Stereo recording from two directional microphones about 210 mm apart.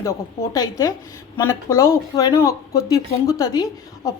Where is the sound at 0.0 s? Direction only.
15° left (ahead or behind).